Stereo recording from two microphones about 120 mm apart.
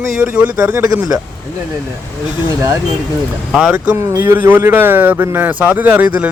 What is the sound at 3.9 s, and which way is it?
Speech, 20° right (ahead or behind).